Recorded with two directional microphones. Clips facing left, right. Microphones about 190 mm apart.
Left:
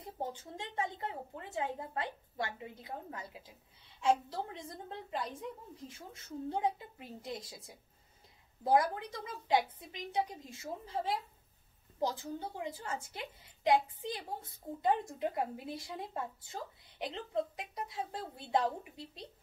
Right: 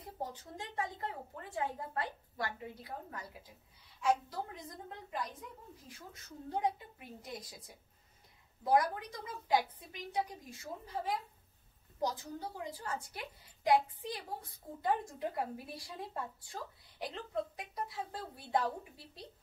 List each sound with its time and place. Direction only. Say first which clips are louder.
0.3 s a woman's voice: left 2 dB; 25° left (ahead or behind)
8.6 s a woman's voice: left 1 dB; 25° left (ahead or behind)